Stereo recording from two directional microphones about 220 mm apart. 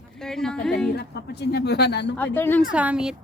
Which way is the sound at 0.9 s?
50° left (ahead or behind).